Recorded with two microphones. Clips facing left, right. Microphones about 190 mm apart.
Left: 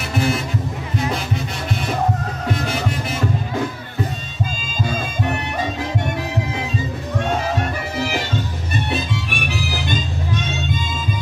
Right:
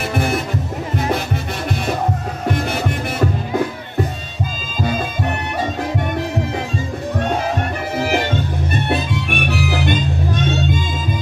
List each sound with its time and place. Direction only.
0.1 s music: 55° right (ahead or behind)
8.0 s music: 50° right (ahead or behind)